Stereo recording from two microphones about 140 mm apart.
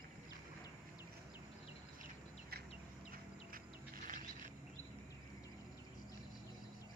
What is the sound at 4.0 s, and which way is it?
Mechanisms, 70° right (ahead or behind).